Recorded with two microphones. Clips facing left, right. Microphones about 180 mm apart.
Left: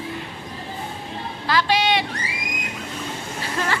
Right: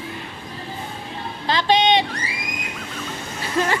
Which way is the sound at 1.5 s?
25° right (ahead or behind).